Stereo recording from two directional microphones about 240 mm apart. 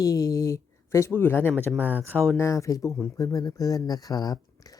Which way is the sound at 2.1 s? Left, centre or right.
Centre.